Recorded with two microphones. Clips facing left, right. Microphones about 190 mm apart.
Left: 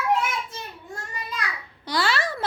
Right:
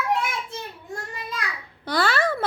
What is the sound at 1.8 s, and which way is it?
Speech, 55° right (ahead or behind).